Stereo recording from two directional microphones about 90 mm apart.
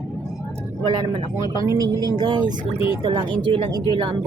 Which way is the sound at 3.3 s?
70° right (ahead or behind).